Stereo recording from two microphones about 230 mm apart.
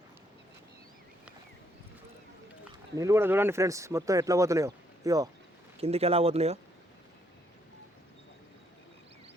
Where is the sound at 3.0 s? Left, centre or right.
Centre.